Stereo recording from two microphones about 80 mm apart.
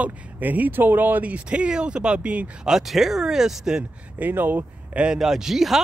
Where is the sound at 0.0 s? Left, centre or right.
Centre.